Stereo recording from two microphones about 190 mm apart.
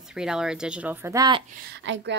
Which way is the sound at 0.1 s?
5° right (ahead or behind).